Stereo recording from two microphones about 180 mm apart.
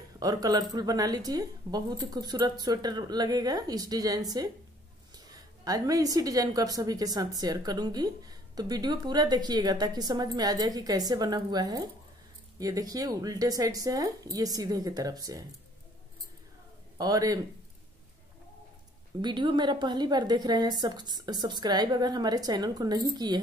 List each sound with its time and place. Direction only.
0.2 s a woman's voice: 20° right (ahead or behind)
17.0 s a woman's voice: 20° right (ahead or behind)
19.2 s a woman's voice: 25° right (ahead or behind)